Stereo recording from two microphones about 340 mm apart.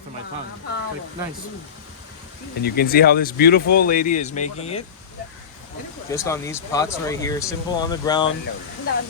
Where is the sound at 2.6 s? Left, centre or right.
Left.